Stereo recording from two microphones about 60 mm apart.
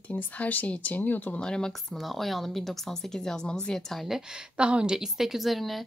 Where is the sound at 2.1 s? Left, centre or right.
Centre.